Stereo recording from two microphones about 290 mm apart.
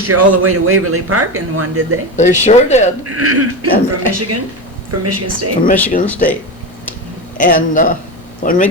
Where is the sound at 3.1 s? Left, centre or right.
Right.